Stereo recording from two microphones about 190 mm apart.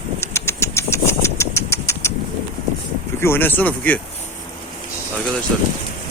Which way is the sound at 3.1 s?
10° left (ahead or behind).